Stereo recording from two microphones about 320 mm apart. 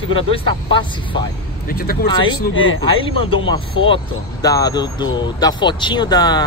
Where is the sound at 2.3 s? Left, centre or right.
Left.